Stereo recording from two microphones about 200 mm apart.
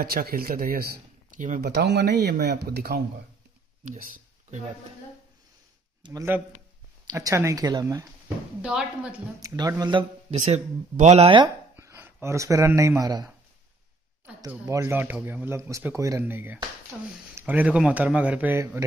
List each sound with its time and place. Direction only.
0.0 s speech: 50° right (ahead or behind)
1.6 s speech: 55° right (ahead or behind)
6.0 s speech: 15° right (ahead or behind)
8.6 s a woman's voice: 5° right (ahead or behind)
9.4 s speech: 15° right (ahead or behind)
10.4 s speech: 35° right (ahead or behind)
11.7 s speech: 10° right (ahead or behind)
14.5 s speech: 15° right (ahead or behind)